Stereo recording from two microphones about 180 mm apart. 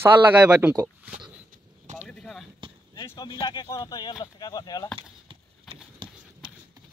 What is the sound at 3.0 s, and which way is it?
Speech, 20° left (ahead or behind).